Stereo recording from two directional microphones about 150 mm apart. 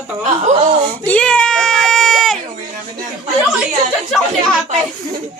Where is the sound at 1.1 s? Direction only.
10° left (ahead or behind).